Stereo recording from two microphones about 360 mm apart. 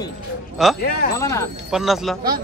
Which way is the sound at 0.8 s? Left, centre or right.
Left.